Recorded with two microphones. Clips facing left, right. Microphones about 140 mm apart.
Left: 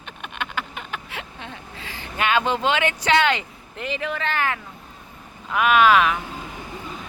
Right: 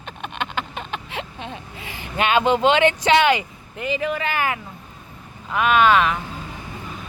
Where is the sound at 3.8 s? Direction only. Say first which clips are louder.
Right 4 dB; 5° right (ahead or behind).